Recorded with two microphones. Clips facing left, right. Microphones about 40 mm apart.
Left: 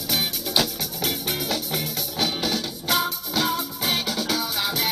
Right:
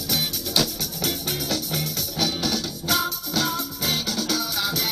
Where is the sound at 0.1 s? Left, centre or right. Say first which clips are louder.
Left 1 dB; centre.